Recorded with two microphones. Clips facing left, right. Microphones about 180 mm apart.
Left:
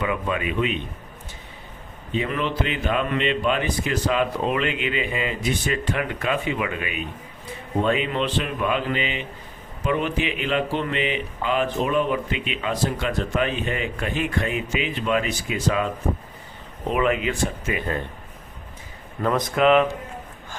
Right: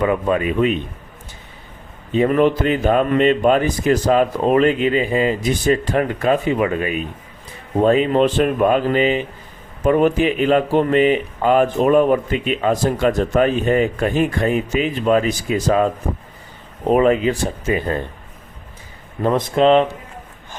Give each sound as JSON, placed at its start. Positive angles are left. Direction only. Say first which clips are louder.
{"t": 0.0, "sound": "speech", "louder": "right 8 dB", "side_deg": -40}
{"t": 2.1, "sound": "speech", "louder": "right 10 dB", "side_deg": -45}
{"t": 16.9, "sound": "speech", "louder": "right 8 dB", "side_deg": -35}
{"t": 19.2, "sound": "speech", "louder": "right 5 dB", "side_deg": -25}